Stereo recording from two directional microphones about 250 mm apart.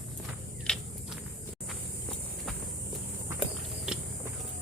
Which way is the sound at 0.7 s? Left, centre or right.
Centre.